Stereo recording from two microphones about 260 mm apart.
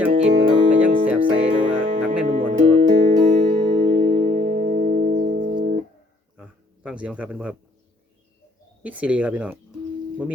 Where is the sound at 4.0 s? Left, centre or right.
Right.